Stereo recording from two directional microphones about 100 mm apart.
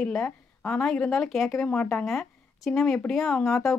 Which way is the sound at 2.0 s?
5° left (ahead or behind).